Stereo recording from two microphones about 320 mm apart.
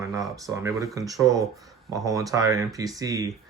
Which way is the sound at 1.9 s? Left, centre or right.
Centre.